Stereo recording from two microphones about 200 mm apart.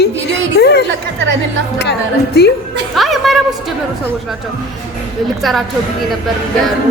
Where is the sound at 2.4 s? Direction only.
55° left (ahead or behind).